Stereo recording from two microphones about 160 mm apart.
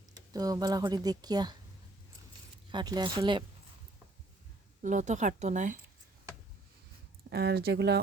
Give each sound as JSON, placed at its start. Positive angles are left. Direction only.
{"t": 0.3, "sound": "a woman's voice", "side_deg": -25}
{"t": 2.6, "sound": "a woman's voice", "side_deg": -25}
{"t": 4.8, "sound": "speech", "side_deg": -50}
{"t": 7.3, "sound": "speech", "side_deg": -85}